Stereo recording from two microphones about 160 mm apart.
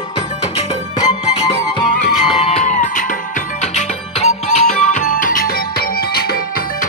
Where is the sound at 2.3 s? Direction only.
40° left (ahead or behind).